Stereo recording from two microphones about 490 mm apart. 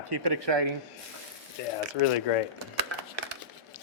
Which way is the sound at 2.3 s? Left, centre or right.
Left.